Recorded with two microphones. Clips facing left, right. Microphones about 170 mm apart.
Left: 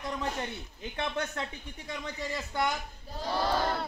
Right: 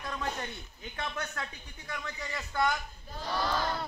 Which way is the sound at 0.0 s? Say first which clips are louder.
Left 3 dB; 15° left (ahead or behind).